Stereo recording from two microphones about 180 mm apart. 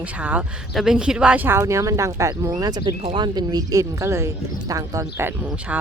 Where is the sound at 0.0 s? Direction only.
10° right (ahead or behind).